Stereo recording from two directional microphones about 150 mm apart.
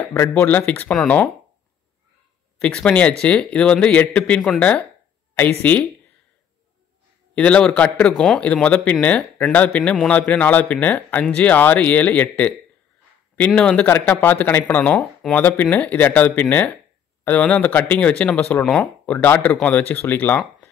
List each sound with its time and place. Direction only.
0.0 s speech: 15° left (ahead or behind)
2.6 s speech: 5° left (ahead or behind)
7.3 s speech: 10° left (ahead or behind)